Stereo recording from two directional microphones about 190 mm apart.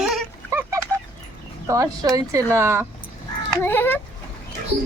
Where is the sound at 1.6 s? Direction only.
15° right (ahead or behind).